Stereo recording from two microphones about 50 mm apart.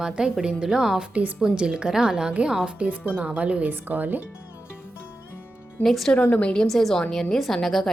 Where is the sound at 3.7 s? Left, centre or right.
Right.